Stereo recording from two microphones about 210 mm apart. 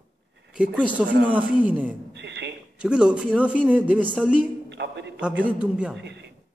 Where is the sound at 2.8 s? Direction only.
5° right (ahead or behind).